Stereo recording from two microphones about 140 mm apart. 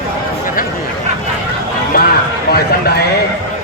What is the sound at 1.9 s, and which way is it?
Speech, 90° left.